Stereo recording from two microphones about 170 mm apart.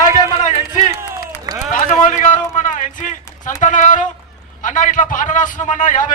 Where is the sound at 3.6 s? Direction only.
50° left (ahead or behind).